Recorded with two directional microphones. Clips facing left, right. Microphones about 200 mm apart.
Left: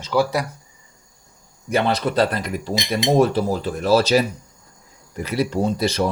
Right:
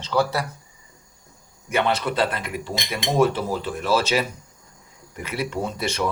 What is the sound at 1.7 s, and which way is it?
Speech, 35° left (ahead or behind).